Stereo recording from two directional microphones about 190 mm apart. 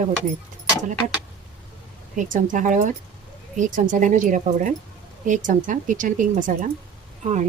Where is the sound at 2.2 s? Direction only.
45° right (ahead or behind).